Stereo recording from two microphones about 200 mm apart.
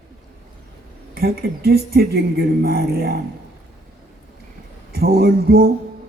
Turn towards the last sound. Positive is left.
turn(degrees=-50)  # may be behind; listen again after turning